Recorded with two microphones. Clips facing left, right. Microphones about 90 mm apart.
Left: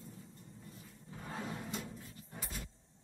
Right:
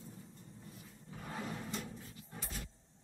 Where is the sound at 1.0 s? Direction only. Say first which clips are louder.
Even; 20° left (ahead or behind).